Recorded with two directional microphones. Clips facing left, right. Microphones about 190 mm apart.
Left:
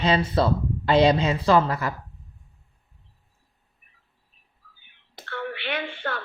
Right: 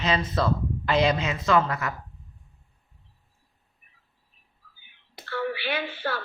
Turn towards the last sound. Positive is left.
turn(degrees=-5)  # may be behind; listen again after turning